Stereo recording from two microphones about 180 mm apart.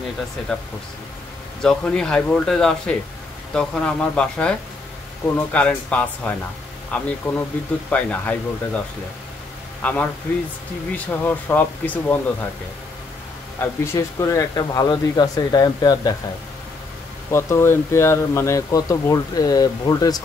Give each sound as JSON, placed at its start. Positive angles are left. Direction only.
{"t": 1.6, "sound": "speech", "side_deg": 5}
{"t": 9.8, "sound": "speech", "side_deg": 5}
{"t": 11.1, "sound": "speech", "side_deg": 10}
{"t": 13.6, "sound": "speech", "side_deg": 15}
{"t": 17.3, "sound": "speech", "side_deg": 15}